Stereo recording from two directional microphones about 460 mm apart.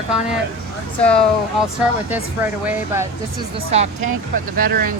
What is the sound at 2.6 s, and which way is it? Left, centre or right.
Speech, centre.